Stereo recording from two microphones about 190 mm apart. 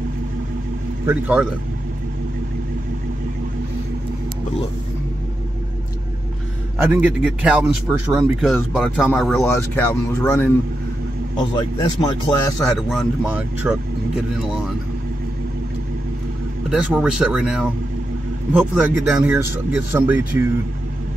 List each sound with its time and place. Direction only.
1.0 s speech: 10° right (ahead or behind)
6.8 s speech: 10° right (ahead or behind)
10.2 s speech: 10° left (ahead or behind)
12.0 s speech: 20° left (ahead or behind)
12.6 s speech: centre (ahead or behind)
16.6 s speech: 5° right (ahead or behind)